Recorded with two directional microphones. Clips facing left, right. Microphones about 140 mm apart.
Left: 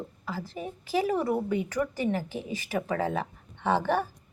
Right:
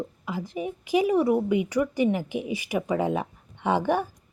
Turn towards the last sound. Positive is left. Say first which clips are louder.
# right 2 dB
turn(degrees=-15)  # may be behind; listen again after turning